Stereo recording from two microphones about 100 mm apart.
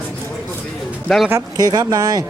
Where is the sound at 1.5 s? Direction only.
40° right (ahead or behind).